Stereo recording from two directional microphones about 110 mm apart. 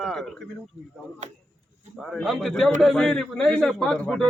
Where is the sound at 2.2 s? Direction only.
Centre (ahead or behind).